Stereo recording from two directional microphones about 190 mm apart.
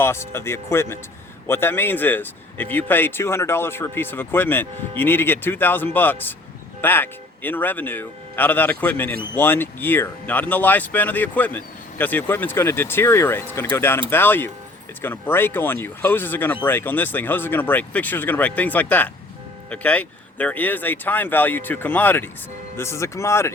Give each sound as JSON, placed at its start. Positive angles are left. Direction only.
{"t": 0.0, "sound": "speech", "side_deg": 15}